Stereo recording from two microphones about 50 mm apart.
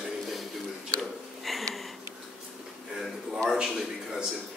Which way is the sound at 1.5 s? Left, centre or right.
Centre.